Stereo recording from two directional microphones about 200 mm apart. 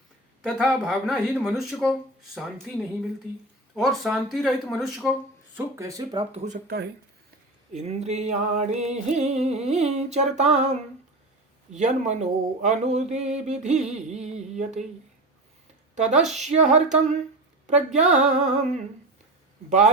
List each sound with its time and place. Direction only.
0.4 s speech: centre (ahead or behind)
3.8 s speech: centre (ahead or behind)
5.5 s speech: 15° right (ahead or behind)
7.7 s speech: 35° right (ahead or behind)
16.0 s speech: 35° right (ahead or behind)